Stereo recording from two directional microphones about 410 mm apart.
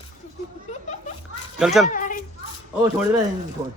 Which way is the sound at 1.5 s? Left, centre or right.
Centre.